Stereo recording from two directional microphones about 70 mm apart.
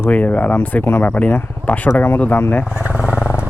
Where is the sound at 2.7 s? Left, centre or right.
Centre.